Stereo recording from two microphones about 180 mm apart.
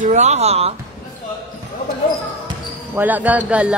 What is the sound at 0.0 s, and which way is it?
Speech, 40° right (ahead or behind).